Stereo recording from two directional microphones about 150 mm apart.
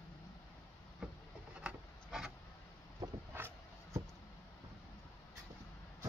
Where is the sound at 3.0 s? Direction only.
25° right (ahead or behind).